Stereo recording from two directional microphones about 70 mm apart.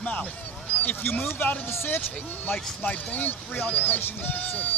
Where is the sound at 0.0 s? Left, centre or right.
Centre.